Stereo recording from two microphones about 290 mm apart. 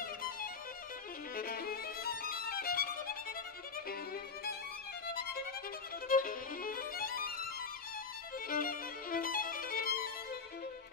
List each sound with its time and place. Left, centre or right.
1.3 s violin: left
6.0 s violin: left
8.5 s violin: left